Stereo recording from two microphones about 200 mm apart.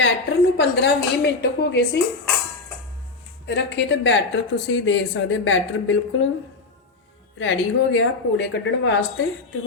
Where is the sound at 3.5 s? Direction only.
60° left (ahead or behind).